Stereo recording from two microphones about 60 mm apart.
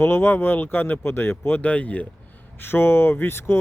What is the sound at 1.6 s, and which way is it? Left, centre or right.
Speech, left.